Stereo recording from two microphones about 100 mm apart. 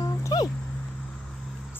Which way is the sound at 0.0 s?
40° left (ahead or behind).